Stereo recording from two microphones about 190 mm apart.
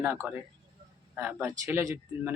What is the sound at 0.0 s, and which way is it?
Speech, 10° right (ahead or behind).